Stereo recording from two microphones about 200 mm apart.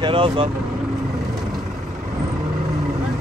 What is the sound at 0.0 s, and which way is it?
Speech, 25° right (ahead or behind).